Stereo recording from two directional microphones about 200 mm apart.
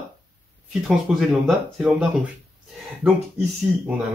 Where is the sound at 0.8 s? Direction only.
5° right (ahead or behind).